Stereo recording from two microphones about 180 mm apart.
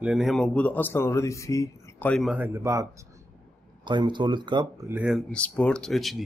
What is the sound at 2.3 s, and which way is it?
Speech, 15° right (ahead or behind).